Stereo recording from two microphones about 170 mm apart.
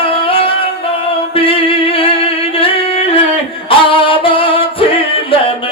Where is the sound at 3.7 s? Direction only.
30° left (ahead or behind).